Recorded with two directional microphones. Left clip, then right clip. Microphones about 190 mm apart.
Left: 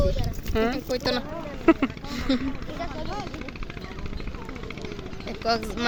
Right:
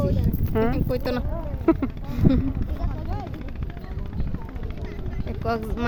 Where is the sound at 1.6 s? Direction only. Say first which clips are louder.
Left 2 dB; 5° right (ahead or behind).